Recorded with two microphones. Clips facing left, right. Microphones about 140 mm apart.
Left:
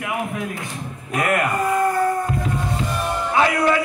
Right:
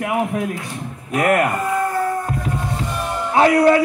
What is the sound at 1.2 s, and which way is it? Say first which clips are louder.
Speech: right 4 dB; 40° right (ahead or behind).